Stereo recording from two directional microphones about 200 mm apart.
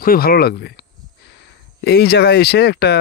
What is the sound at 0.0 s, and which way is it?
Speech, 45° left (ahead or behind).